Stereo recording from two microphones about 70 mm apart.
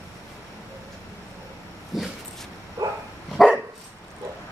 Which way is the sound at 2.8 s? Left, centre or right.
Right.